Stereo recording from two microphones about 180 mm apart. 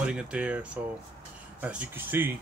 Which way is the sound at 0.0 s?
5° right (ahead or behind).